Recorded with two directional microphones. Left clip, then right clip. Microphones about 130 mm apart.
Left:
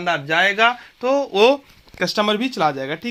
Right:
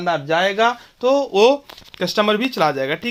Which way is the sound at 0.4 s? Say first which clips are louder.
Left 1 dB; 15° right (ahead or behind).